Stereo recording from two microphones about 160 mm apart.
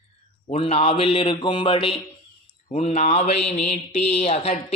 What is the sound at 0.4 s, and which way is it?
A man's voice, 35° left (ahead or behind).